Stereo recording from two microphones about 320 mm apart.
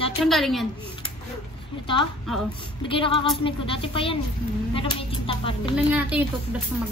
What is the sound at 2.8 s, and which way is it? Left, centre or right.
Speech, centre.